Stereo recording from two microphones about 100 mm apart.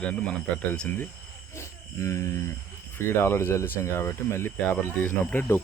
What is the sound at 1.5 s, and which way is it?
Speech, 30° left (ahead or behind).